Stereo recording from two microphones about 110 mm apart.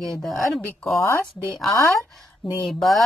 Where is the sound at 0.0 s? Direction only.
5° left (ahead or behind).